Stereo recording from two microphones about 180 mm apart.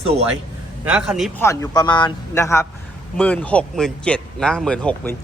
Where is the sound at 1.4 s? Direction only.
15° left (ahead or behind).